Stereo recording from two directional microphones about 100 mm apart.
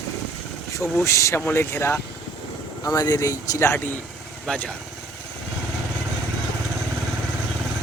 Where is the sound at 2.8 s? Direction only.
40° left (ahead or behind); by 3.9 s 25° left (ahead or behind).